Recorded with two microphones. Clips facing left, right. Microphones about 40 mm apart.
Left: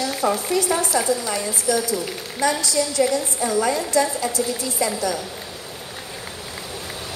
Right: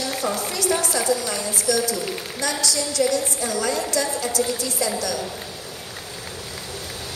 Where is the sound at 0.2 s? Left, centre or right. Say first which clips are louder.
Left 6 dB; centre.